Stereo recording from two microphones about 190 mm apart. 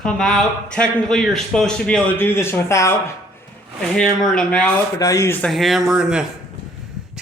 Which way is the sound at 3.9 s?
5° left (ahead or behind).